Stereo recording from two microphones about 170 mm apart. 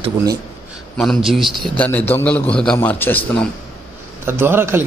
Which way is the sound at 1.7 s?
10° left (ahead or behind).